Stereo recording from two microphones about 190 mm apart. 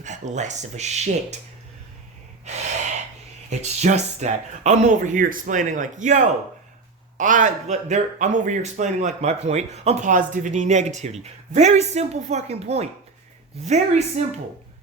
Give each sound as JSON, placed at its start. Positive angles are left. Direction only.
{"t": 0.0, "sound": "speech", "side_deg": -40}
{"t": 2.4, "sound": "gasp", "side_deg": -35}
{"t": 3.5, "sound": "speech", "side_deg": -35}